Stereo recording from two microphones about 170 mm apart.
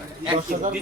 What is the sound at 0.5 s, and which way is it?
Speech, 55° right (ahead or behind).